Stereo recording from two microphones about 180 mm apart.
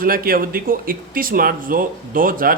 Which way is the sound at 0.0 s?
55° right (ahead or behind).